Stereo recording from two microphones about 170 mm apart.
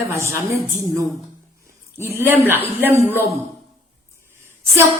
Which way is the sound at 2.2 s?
10° right (ahead or behind).